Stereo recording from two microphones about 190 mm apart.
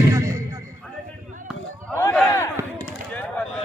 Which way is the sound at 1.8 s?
10° left (ahead or behind).